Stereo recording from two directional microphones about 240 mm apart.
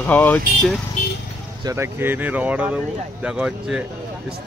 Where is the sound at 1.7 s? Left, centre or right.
Centre.